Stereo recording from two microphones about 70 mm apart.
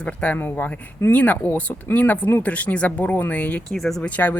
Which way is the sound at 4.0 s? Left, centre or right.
Left.